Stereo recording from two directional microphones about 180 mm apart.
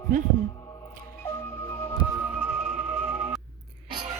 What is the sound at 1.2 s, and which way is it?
Music, 15° left (ahead or behind).